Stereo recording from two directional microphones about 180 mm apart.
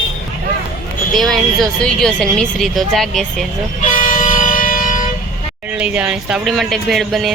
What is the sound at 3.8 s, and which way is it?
Vehicle, 45° left (ahead or behind).